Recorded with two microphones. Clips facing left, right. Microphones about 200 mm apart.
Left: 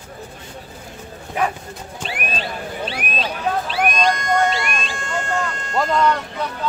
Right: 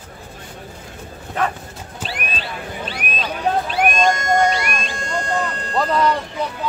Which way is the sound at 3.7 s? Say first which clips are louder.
Right 1 dB; 50° right (ahead or behind).